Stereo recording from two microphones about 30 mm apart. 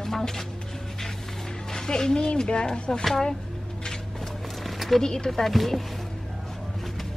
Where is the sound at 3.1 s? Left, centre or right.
Centre.